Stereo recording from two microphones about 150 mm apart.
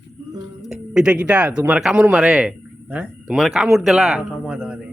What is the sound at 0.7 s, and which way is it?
Speech, 5° right (ahead or behind).